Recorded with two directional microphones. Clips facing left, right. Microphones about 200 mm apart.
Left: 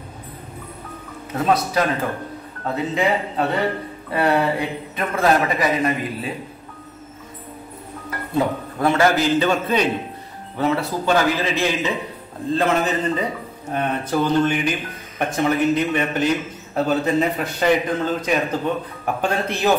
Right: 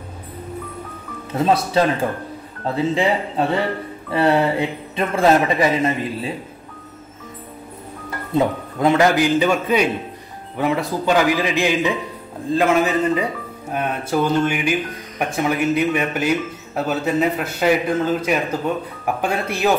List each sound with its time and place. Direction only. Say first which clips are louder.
1.4 s speech: right 2 dB; 25° right (ahead or behind)
8.4 s speech: right 2 dB; 15° right (ahead or behind)